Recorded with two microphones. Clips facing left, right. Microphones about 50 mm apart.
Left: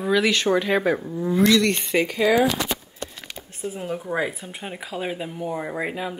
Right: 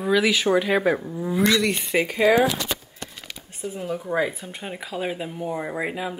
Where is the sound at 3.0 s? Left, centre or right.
Left.